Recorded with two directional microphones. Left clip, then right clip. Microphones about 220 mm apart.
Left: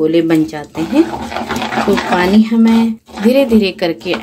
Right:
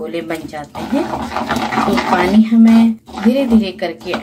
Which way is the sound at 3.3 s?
45° left (ahead or behind).